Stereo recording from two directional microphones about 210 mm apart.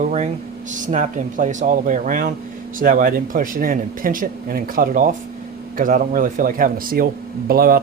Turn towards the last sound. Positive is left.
turn(degrees=-45)  # may be behind; listen again after turning